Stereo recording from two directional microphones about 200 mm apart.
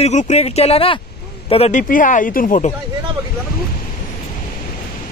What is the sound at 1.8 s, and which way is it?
Speech, 40° left (ahead or behind).